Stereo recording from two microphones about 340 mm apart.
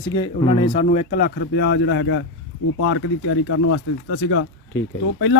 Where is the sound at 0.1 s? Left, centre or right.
Centre.